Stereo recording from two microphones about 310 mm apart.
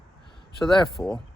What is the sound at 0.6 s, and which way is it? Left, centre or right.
Speech, centre.